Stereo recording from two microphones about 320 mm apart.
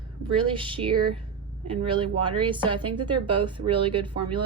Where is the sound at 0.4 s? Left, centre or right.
Centre.